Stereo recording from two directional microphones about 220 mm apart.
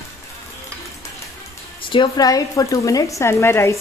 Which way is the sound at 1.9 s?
20° left (ahead or behind).